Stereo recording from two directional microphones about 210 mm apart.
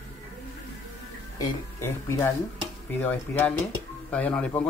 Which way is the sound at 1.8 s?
15° left (ahead or behind).